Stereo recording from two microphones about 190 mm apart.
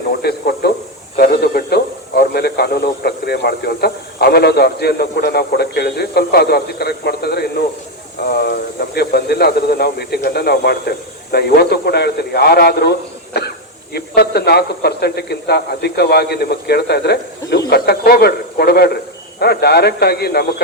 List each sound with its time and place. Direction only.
0.2 s a man's voice: 55° left (ahead or behind)
13.3 s throat clearing: 60° left (ahead or behind)
13.9 s a man's voice: 55° left (ahead or behind)